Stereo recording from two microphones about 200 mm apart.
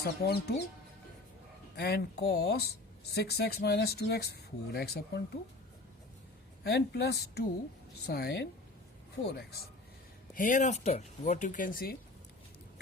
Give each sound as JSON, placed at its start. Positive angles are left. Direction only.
{"t": 0.2, "sound": "speech", "side_deg": 50}
{"t": 1.7, "sound": "speech", "side_deg": 55}
{"t": 6.7, "sound": "speech", "side_deg": 55}
{"t": 10.3, "sound": "speech", "side_deg": 40}